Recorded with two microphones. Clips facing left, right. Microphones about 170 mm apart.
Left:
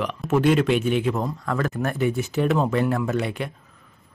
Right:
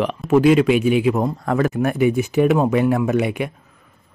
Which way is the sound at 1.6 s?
15° right (ahead or behind).